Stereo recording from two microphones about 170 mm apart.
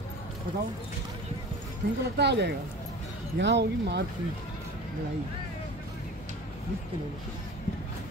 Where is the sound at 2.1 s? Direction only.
85° right.